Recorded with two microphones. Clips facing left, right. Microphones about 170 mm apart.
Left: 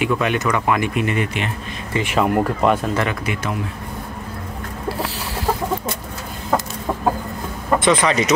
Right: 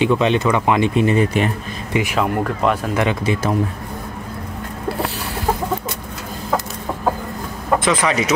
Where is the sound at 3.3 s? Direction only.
35° right (ahead or behind).